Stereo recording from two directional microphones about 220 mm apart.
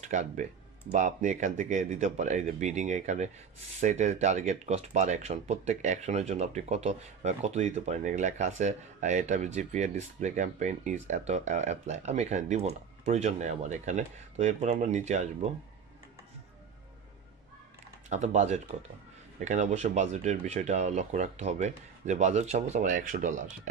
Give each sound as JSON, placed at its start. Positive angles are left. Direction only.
{"t": 0.1, "sound": "speech", "side_deg": -35}
{"t": 18.1, "sound": "speech", "side_deg": -30}